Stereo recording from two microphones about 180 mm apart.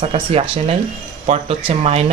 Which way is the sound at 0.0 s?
35° right (ahead or behind).